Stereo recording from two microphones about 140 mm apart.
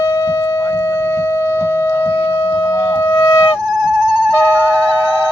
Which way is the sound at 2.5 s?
20° left (ahead or behind).